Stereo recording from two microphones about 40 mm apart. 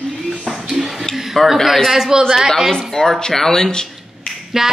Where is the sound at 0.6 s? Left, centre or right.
Centre.